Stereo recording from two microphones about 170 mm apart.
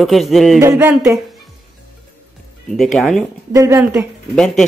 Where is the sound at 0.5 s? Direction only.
15° right (ahead or behind).